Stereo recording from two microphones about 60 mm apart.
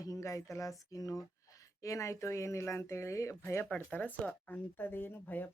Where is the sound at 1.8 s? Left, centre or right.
Left.